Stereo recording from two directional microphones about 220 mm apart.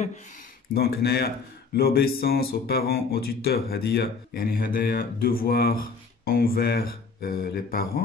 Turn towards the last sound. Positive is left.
turn(degrees=40)  # may be behind; listen again after turning